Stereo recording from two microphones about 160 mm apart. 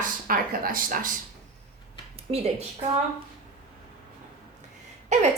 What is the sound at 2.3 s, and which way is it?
Speech, 40° right (ahead or behind).